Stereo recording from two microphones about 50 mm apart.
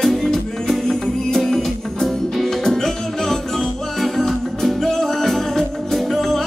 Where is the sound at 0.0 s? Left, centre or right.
Centre.